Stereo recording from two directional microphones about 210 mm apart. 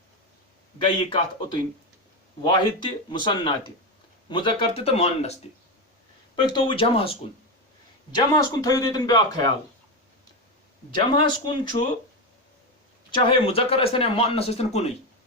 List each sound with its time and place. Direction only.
0.9 s speech: 25° left (ahead or behind)
6.5 s speech: 25° left (ahead or behind)
8.1 s a man's voice: 15° left (ahead or behind)
10.9 s speech: 20° left (ahead or behind)
13.1 s speech: 25° left (ahead or behind)